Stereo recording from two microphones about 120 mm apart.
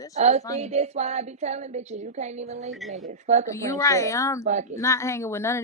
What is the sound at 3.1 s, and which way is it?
Speech, 75° right (ahead or behind).